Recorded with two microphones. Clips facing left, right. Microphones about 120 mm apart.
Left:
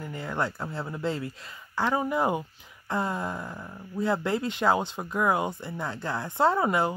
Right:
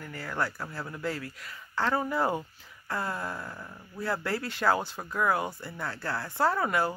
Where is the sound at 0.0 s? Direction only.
20° left (ahead or behind).